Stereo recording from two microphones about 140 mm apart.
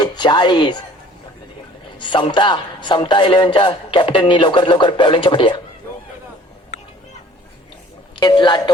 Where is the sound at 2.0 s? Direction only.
35° left (ahead or behind).